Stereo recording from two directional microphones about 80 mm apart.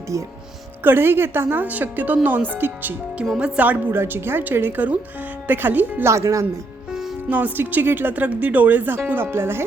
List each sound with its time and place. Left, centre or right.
0.1 s speech: right
0.9 s speech: right
3.3 s speech: centre
6.1 s speech: right
6.9 s music: centre
7.3 s speech: right